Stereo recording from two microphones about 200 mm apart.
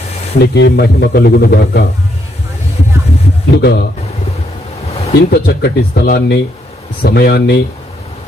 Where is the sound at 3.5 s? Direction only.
55° left (ahead or behind).